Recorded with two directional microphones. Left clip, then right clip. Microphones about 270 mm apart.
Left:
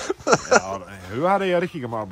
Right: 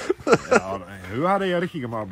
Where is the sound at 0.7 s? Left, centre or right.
Centre.